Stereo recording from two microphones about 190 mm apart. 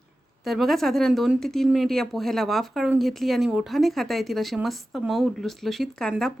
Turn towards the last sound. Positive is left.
turn(degrees=0)  # may be behind; listen again after turning